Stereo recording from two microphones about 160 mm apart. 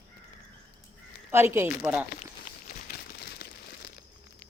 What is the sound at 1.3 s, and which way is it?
Speech, 15° right (ahead or behind).